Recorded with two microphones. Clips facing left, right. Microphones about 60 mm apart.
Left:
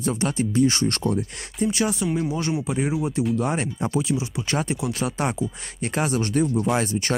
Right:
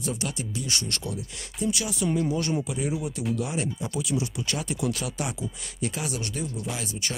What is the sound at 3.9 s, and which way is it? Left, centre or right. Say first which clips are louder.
Speech: left 4 dB; left.